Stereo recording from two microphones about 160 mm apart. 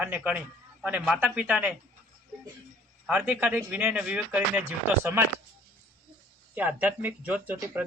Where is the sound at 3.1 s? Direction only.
10° right (ahead or behind).